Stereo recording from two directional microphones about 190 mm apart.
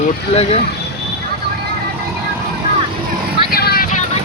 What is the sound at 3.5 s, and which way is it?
Vehicle, 55° left (ahead or behind).